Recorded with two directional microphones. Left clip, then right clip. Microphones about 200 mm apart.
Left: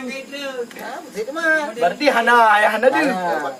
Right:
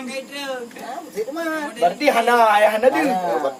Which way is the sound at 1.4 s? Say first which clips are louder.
Left 3 dB; 10° right (ahead or behind).